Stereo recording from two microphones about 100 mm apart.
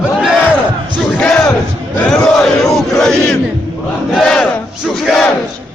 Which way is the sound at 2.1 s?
5° left (ahead or behind).